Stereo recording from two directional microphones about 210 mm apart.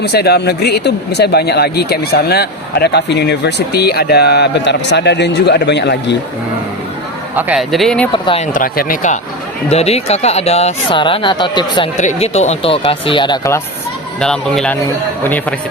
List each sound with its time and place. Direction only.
0.0 s speech: 50° left (ahead or behind)
7.3 s speech: 5° right (ahead or behind)
8.1 s speech: 25° left (ahead or behind)
8.5 s speech: 45° left (ahead or behind); by 11.9 s 20° left (ahead or behind)
11.9 s speech: 35° left (ahead or behind); by 13.6 s 15° left (ahead or behind)
14.2 s speech: 5° left (ahead or behind)